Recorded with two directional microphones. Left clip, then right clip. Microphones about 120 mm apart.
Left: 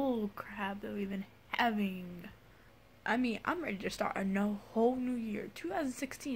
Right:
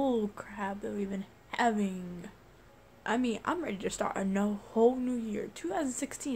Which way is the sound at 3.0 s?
20° right (ahead or behind).